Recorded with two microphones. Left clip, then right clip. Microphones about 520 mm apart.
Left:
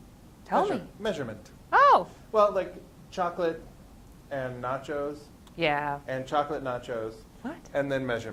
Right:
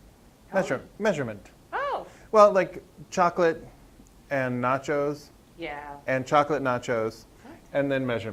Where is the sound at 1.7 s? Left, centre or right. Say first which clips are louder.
Left 11 dB; left.